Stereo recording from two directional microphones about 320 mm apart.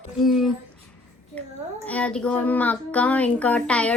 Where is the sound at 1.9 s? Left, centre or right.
Centre.